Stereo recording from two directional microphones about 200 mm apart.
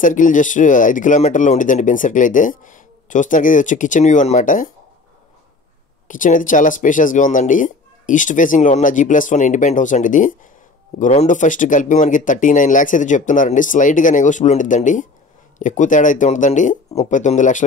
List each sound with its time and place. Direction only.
0.0 s speech: 40° left (ahead or behind)
6.0 s speech: 40° left (ahead or behind)